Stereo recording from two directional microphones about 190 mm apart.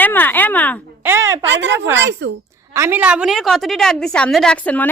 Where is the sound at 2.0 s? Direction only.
70° right (ahead or behind).